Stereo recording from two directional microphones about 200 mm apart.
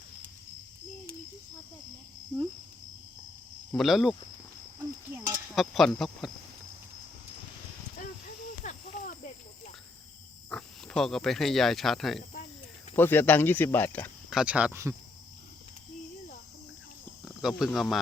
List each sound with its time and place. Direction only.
3.7 s speech: centre (ahead or behind)
4.8 s a sound: 15° right (ahead or behind)
5.5 s speech: centre (ahead or behind)
8.6 s snake: 40° left (ahead or behind)
10.5 s speech: 5° left (ahead or behind)
14.3 s speech: 5° right (ahead or behind)
17.2 s speech: centre (ahead or behind)